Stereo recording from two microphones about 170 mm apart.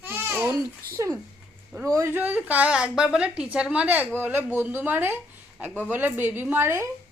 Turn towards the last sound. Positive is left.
turn(degrees=-15)  # may be behind; listen again after turning